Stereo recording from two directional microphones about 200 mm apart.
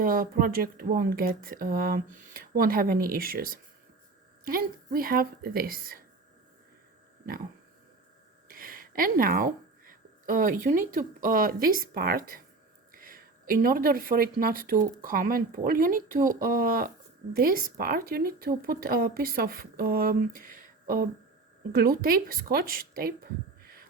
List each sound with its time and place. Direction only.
0.0 s speech: 45° right (ahead or behind)
8.4 s speech: 45° right (ahead or behind)